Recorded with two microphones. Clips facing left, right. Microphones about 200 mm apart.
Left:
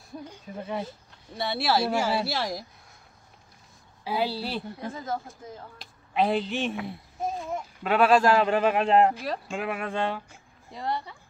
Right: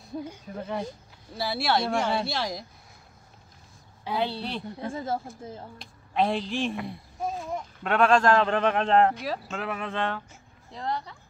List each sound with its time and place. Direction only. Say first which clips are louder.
0.6 s speech: even; 5° left (ahead or behind)
4.0 s speech: left 1 dB; 5° left (ahead or behind)
4.8 s a woman's voice: right 6 dB; 30° right (ahead or behind)
5.8 s speech: even; centre (ahead or behind)